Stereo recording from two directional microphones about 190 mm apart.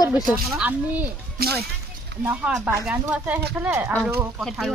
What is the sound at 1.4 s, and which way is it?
Speech, 55° right (ahead or behind).